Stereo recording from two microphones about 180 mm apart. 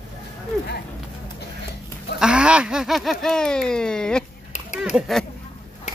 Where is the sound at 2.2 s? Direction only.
5° right (ahead or behind).